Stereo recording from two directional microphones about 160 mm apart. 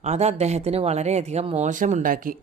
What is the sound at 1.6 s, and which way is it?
Speech, 50° right (ahead or behind).